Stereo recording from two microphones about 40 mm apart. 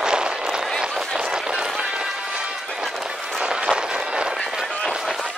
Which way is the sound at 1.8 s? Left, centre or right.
Right.